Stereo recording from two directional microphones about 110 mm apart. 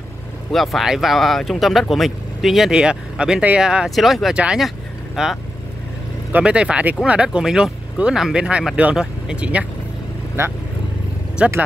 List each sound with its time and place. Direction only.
0.5 s speech: centre (ahead or behind)
10.4 s speech: 25° right (ahead or behind)
11.4 s speech: 10° right (ahead or behind)